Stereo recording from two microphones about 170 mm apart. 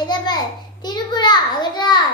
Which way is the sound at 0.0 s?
25° left (ahead or behind).